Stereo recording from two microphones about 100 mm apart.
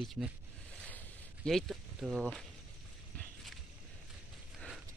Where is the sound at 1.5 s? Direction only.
5° left (ahead or behind).